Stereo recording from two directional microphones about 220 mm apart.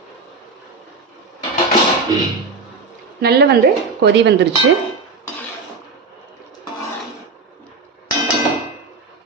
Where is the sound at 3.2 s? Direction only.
45° right (ahead or behind).